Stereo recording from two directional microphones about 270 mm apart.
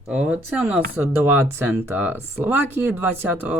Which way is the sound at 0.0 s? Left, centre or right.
Centre.